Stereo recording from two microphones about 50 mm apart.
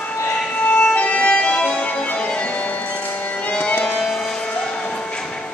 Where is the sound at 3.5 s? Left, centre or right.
Left.